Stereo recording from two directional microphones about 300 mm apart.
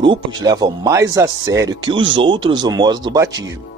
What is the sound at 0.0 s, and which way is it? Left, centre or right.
Speech, centre.